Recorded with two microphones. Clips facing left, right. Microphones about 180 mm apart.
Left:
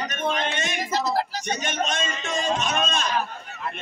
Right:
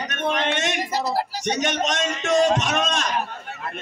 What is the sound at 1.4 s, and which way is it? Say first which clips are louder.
A man's voice: right 4 dB; 80° right.